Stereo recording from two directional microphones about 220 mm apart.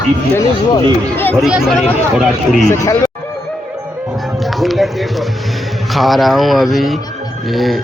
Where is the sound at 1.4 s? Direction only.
Centre (ahead or behind).